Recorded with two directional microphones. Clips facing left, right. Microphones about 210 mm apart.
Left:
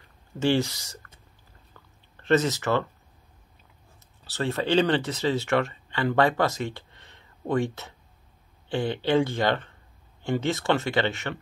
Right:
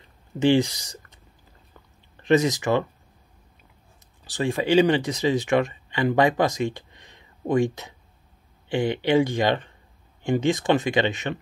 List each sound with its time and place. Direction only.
0.4 s speech: 15° right (ahead or behind)
1.7 s a sound: 15° right (ahead or behind)
4.2 s speech: 15° right (ahead or behind)